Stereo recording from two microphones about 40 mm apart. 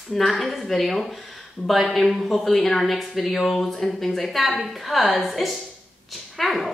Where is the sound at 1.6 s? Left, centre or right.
Left.